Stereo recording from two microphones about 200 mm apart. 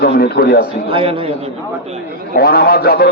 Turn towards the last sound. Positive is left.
turn(degrees=45)  # may be behind; listen again after turning